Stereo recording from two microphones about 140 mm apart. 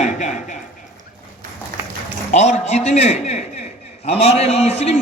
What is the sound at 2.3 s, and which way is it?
A man's voice, 60° left (ahead or behind).